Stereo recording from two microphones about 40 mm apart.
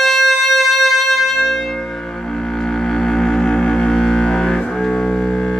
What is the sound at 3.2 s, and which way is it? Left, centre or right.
Music, centre.